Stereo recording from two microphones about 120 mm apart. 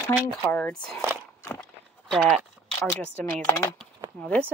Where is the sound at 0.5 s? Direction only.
15° left (ahead or behind).